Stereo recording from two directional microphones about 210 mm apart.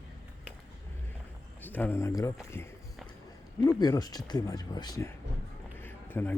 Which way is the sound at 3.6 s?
20° left (ahead or behind).